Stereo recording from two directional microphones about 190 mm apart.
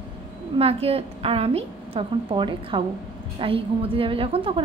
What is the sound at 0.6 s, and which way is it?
A woman's voice, 30° right (ahead or behind).